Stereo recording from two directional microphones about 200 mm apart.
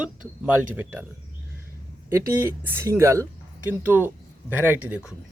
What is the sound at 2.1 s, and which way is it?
Speech, 10° right (ahead or behind).